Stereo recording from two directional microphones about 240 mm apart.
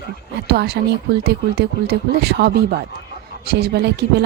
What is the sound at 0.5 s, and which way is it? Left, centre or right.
Speech, right.